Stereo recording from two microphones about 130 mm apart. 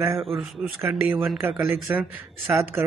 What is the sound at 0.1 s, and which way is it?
Speech, centre (ahead or behind).